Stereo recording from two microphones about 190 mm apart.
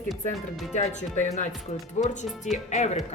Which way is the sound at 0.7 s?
40° left (ahead or behind).